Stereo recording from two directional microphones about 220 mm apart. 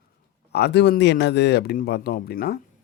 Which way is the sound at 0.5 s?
50° left (ahead or behind).